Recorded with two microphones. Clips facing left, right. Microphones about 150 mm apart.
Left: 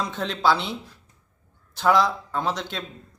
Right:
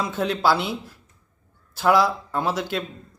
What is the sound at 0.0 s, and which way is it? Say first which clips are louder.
A man's voice: right 2 dB; 5° right (ahead or behind).